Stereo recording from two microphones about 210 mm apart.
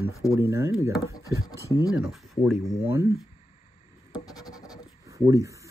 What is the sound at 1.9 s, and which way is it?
Speech, centre (ahead or behind).